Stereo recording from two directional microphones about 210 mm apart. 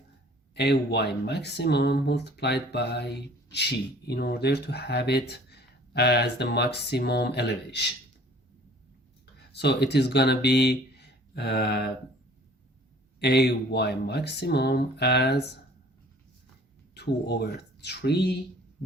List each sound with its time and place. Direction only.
0.5 s speech: 55° left (ahead or behind)
9.5 s speech: 50° left (ahead or behind)
13.1 s speech: 50° left (ahead or behind)
16.9 s speech: 50° left (ahead or behind)